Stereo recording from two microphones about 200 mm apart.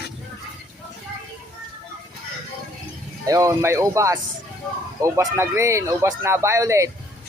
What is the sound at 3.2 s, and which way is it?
Speech, 15° right (ahead or behind).